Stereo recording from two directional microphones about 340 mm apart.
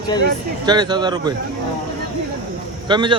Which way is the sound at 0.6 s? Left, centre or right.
Centre.